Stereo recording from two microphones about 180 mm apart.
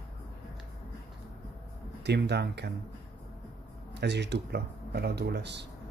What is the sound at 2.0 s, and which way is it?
Speech, 70° right (ahead or behind).